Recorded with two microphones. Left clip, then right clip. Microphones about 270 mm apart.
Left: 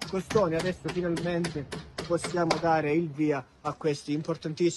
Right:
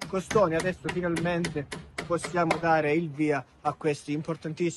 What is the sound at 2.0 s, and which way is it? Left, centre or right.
Speech, right.